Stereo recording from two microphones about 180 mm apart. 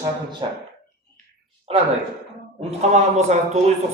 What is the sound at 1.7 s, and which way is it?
Speech, 35° right (ahead or behind).